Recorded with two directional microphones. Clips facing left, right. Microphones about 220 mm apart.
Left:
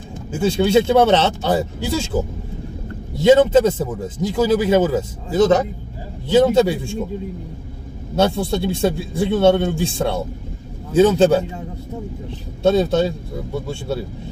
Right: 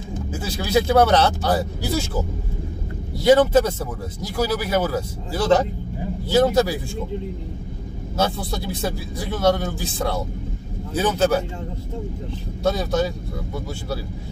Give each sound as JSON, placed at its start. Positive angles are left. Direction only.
{"t": 0.3, "sound": "a man's voice", "side_deg": 25}
{"t": 3.2, "sound": "a man's voice", "side_deg": 25}
{"t": 8.2, "sound": "a man's voice", "side_deg": 25}
{"t": 12.6, "sound": "a man's voice", "side_deg": 25}